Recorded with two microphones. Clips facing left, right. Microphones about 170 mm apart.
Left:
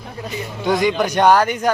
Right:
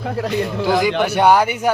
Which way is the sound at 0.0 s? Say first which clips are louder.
Right 8 dB; 80° right.